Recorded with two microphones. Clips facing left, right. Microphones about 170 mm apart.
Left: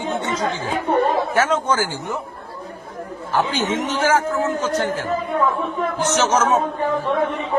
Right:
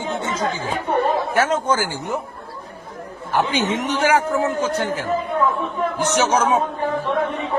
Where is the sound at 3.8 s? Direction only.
15° right (ahead or behind).